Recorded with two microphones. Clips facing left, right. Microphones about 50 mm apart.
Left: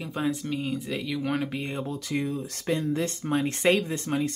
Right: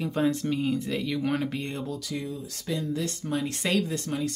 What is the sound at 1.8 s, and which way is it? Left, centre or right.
Speech, left.